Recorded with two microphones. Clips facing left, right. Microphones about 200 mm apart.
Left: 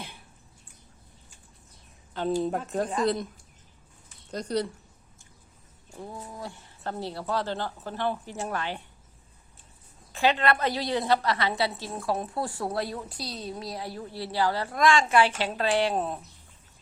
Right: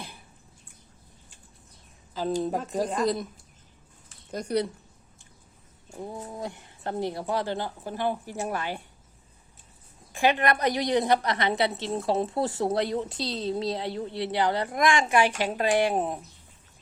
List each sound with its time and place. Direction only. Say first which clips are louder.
2.4 s speech: even; centre (ahead or behind)
4.3 s speech: right 2 dB; 10° right (ahead or behind)
5.9 s speech: right 3 dB; 25° right (ahead or behind)
10.1 s a woman's voice: right 1 dB; 15° right (ahead or behind)